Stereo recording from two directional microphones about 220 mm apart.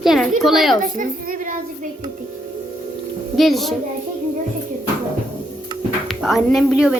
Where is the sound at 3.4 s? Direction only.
Centre (ahead or behind).